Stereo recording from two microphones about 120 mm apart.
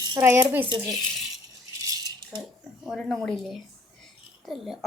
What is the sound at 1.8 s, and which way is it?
Rattle, 30° right (ahead or behind).